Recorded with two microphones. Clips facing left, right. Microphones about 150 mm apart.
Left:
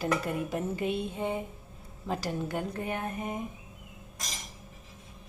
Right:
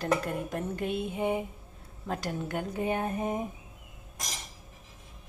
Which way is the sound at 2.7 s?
25° right (ahead or behind).